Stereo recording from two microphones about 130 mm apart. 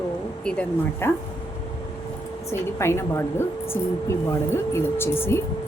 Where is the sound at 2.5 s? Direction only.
20° left (ahead or behind).